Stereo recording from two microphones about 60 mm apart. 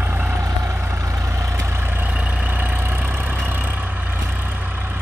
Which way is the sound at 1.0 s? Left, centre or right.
Right.